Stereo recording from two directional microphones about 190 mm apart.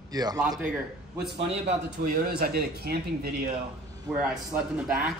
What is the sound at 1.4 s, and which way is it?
Speech, 30° right (ahead or behind).